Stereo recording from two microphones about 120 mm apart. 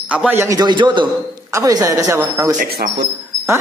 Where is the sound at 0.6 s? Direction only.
40° right (ahead or behind).